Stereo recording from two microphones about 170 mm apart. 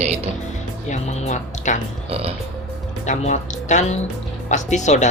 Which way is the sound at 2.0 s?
35° right (ahead or behind).